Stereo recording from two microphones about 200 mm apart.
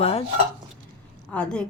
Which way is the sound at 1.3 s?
5° left (ahead or behind).